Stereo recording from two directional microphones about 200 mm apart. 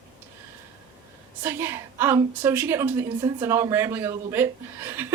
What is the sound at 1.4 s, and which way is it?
A woman's voice, 10° right (ahead or behind).